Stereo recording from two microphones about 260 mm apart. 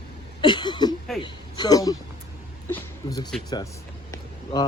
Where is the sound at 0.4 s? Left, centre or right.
Centre.